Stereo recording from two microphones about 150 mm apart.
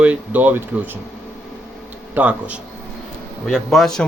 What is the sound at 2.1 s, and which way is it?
A man's voice, 10° right (ahead or behind).